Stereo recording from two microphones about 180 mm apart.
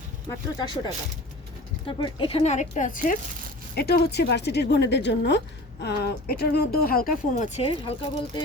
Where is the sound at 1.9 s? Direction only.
30° left (ahead or behind); by 3.2 s 50° left (ahead or behind).